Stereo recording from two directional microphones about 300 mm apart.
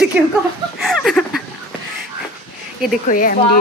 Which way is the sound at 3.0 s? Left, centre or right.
Left.